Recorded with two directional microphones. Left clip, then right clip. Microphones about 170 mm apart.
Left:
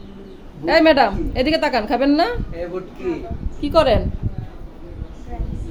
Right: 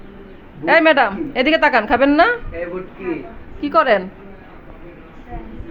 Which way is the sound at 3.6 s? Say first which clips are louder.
Right 1 dB; 5° left (ahead or behind).